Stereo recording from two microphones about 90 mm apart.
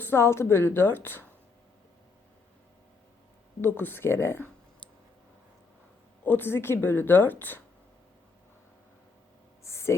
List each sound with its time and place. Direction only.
0.0 s speech: 30° left (ahead or behind)
3.6 s speech: 25° left (ahead or behind)
6.2 s speech: 20° left (ahead or behind)
9.6 s a sound: 30° left (ahead or behind)